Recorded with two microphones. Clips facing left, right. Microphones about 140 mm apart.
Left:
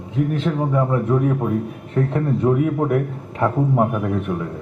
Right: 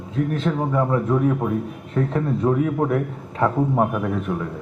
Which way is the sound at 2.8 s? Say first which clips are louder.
Left 2 dB; 15° left (ahead or behind).